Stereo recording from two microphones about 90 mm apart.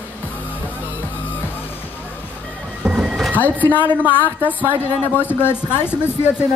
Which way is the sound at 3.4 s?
20° left (ahead or behind).